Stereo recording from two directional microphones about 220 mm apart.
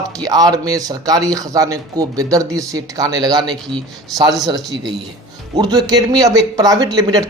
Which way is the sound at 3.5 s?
Centre (ahead or behind).